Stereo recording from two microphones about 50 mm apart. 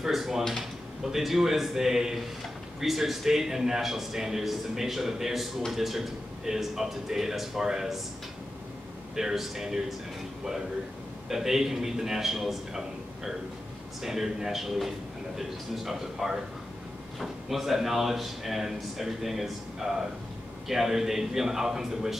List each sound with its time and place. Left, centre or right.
0.0 s a man's voice: centre
9.1 s a man's voice: centre
11.2 s a man's voice: centre